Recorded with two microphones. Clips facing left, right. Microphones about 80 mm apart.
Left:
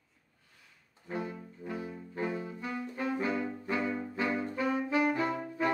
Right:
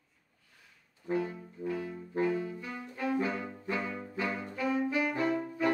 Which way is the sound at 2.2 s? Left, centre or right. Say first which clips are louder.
Right 3 dB; left.